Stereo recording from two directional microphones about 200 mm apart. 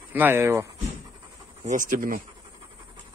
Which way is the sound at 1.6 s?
40° right (ahead or behind).